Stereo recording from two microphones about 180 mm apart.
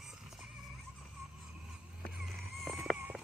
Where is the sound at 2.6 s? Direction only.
Centre (ahead or behind).